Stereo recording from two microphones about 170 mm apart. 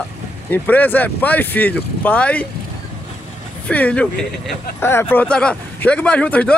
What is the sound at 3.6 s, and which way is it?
A man's voice, 10° left (ahead or behind).